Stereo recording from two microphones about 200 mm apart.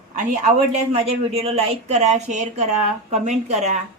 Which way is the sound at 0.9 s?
30° right (ahead or behind).